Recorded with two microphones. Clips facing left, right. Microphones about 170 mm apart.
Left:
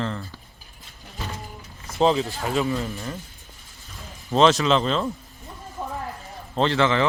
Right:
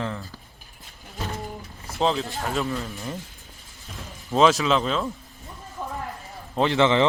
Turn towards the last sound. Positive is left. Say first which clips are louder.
# right 1 dB
turn(degrees=-20)  # may be behind; listen again after turning